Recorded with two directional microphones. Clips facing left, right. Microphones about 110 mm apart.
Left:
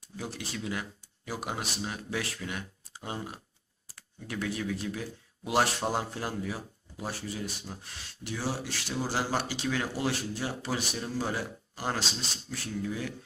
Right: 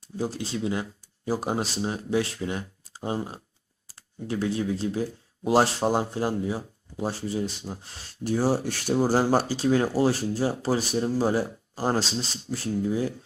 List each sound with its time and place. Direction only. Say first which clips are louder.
0.2 s speech: right 9 dB; 30° right (ahead or behind)
8.2 s speech: right 10 dB; 45° right (ahead or behind)